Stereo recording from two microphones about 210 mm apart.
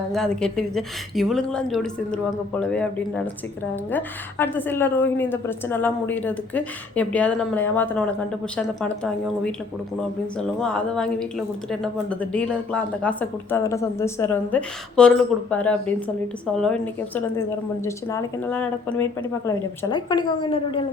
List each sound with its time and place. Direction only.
0.1 s a woman's voice: centre (ahead or behind); by 20.8 s 25° left (ahead or behind)